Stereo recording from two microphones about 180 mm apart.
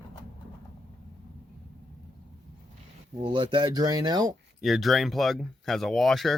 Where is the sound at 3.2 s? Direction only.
30° right (ahead or behind).